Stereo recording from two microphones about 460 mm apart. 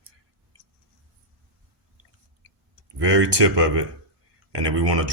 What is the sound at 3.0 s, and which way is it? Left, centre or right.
Speech, right.